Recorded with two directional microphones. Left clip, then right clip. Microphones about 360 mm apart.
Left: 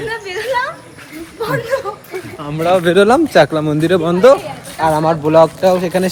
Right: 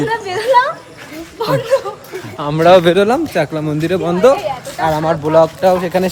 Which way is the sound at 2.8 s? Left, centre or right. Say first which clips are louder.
Left 2 dB; centre.